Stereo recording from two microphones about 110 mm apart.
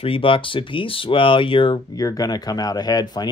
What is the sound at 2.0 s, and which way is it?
Speech, 35° left (ahead or behind).